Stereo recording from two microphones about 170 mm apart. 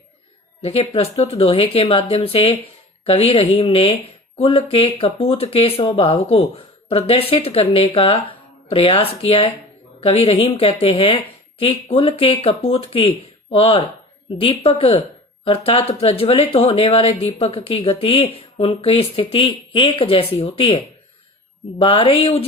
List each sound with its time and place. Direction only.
0.6 s speech: 35° left (ahead or behind)